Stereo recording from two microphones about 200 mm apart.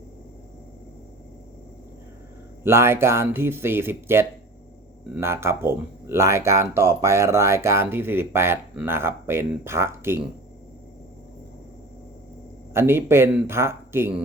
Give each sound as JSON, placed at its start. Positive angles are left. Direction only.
{"t": 2.6, "sound": "speech", "side_deg": -10}
{"t": 12.7, "sound": "speech", "side_deg": -10}